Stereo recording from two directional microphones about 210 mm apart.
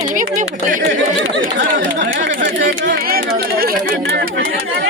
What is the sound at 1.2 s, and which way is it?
Speech, 65° right (ahead or behind).